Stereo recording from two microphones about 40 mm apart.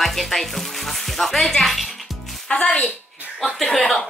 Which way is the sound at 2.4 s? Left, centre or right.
Left.